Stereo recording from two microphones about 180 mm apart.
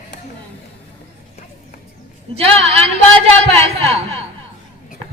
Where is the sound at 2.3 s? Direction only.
35° right (ahead or behind).